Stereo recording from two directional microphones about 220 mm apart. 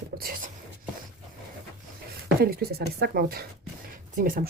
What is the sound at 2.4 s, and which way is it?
Speech, 45° right (ahead or behind).